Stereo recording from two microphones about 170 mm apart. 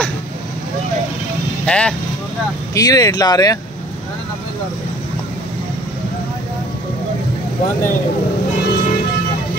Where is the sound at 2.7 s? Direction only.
20° left (ahead or behind).